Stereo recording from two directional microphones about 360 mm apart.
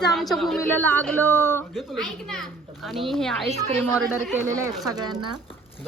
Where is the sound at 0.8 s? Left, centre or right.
Right.